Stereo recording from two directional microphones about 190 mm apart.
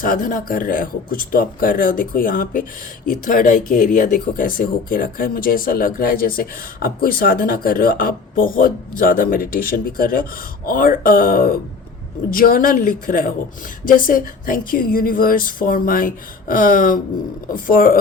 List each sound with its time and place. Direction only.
0.0 s speech: 45° left (ahead or behind)